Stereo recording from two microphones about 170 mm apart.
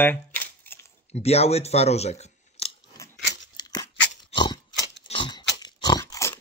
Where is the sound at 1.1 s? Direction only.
40° left (ahead or behind).